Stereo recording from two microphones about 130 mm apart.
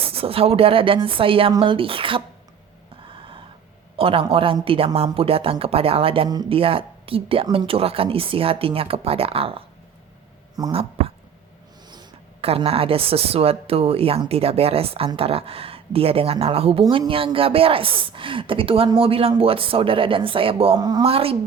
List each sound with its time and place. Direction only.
0.0 s a woman's voice: 45° right (ahead or behind)
3.1 s gasp: 40° right (ahead or behind)
3.9 s a woman's voice: 45° right (ahead or behind)
6.2 s speech: 30° right (ahead or behind)
6.5 s a woman's voice: 45° right (ahead or behind)
10.7 s a woman's voice: 45° right (ahead or behind)
12.4 s a woman's voice: 50° right (ahead or behind)
20.7 s speech: 30° right (ahead or behind)
21.0 s a woman's voice: 45° right (ahead or behind)